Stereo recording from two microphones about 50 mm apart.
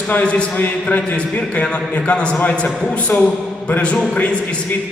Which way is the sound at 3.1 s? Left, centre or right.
Left.